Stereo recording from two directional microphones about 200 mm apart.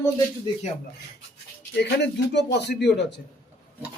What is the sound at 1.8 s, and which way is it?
A man's voice, 60° left (ahead or behind).